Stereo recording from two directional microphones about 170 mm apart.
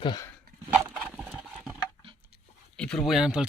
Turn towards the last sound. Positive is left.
turn(degrees=-5)  # may be behind; listen again after turning